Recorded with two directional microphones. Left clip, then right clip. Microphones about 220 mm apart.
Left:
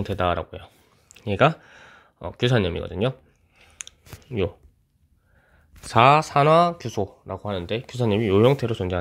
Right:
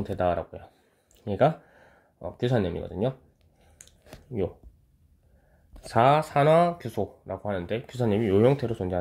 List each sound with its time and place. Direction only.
0.0 s speech: 30° left (ahead or behind)
4.4 s speech: 25° left (ahead or behind)
5.9 s speech: 30° left (ahead or behind)